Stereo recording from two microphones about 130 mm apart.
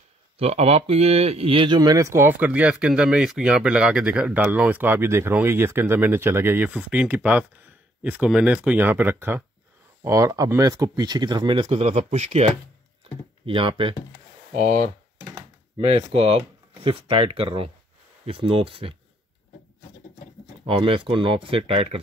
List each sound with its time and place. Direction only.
0.4 s speech: 50° right (ahead or behind)
1.8 s speech: 25° right (ahead or behind); by 12.4 s 60° right (ahead or behind)
13.5 s speech: 40° right (ahead or behind)
14.5 s speech: 90° right
16.0 s speech: 50° right (ahead or behind)
20.6 s speech: 45° right (ahead or behind)